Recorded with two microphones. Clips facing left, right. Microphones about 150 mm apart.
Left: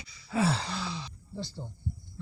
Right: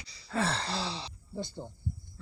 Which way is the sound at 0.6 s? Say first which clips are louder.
Right 1 dB; 30° right (ahead or behind).